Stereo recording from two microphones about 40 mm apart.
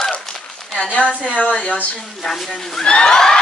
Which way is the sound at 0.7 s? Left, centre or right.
Left.